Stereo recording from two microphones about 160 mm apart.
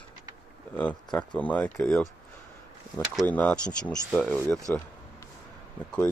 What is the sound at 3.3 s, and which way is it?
Speech, 10° left (ahead or behind).